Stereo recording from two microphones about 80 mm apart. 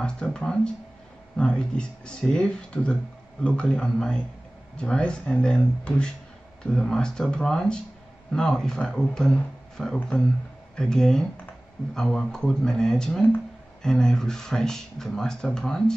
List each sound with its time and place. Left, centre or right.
0.0 s speech: centre